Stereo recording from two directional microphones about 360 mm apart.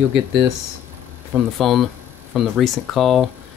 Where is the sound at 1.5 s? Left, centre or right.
Centre.